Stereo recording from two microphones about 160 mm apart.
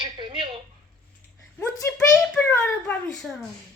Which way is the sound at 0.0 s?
30° right (ahead or behind).